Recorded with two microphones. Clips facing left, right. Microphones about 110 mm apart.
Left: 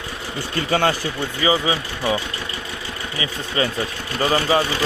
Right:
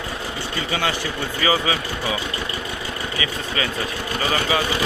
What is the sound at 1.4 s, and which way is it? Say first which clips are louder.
Speech: left 1 dB; 25° left (ahead or behind).